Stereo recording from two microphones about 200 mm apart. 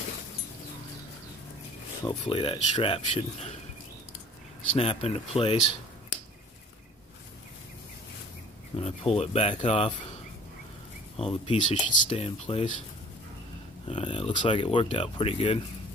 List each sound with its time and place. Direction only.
2.0 s speech: 25° left (ahead or behind)
4.7 s speech: 30° left (ahead or behind)
8.7 s speech: 30° left (ahead or behind)
11.1 s speech: 30° left (ahead or behind)
13.8 s speech: 25° left (ahead or behind)